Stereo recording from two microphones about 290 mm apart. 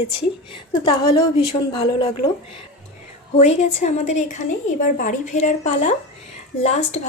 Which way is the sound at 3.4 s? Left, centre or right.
Left.